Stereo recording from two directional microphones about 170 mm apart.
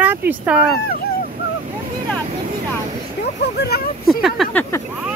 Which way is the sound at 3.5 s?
70° left (ahead or behind).